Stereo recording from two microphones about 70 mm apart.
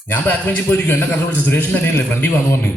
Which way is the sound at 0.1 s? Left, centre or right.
Left.